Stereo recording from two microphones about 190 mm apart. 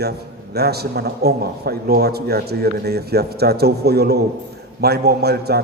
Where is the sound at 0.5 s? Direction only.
55° right (ahead or behind).